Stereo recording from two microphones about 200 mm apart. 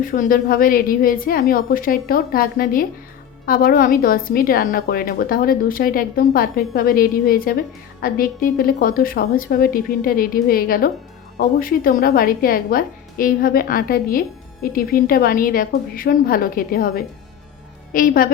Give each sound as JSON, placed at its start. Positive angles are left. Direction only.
{"t": 0.0, "sound": "a woman's voice", "side_deg": 45}